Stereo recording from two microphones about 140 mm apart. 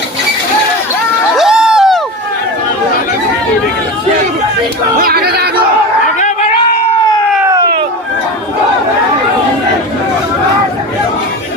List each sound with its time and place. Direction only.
1.4 s crowd: 5° right (ahead or behind)
4.9 s yodeling: 90° right
7.4 s a sound: 25° right (ahead or behind)